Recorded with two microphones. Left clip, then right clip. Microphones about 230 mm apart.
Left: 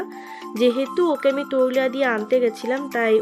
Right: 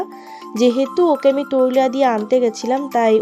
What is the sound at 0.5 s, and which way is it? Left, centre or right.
Speech, centre.